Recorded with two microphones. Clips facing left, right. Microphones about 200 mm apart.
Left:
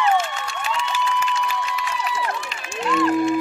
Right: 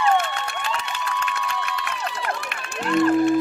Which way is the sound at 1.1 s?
65° right (ahead or behind).